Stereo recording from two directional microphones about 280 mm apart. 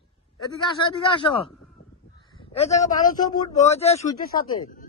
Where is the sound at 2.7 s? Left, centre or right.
Centre; by 4.8 s left.